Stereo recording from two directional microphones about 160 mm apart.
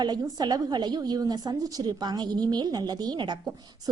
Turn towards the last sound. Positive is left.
turn(degrees=-25)  # may be behind; listen again after turning